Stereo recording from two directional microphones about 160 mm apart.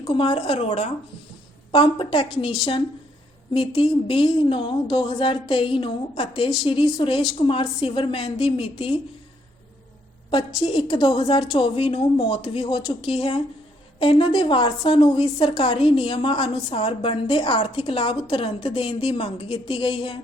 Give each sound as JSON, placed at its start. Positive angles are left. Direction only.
{"t": 0.1, "sound": "a woman's voice", "side_deg": 35}
{"t": 3.5, "sound": "a woman's voice", "side_deg": 35}
{"t": 10.6, "sound": "a woman's voice", "side_deg": 30}